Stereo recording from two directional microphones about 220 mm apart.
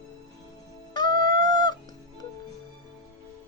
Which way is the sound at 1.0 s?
40° right (ahead or behind).